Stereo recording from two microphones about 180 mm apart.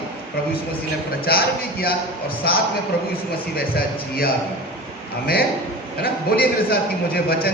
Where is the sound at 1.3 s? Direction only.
60° left (ahead or behind).